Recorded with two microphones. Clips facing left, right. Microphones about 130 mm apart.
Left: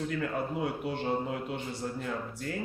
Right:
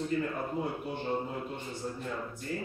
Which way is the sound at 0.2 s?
80° left.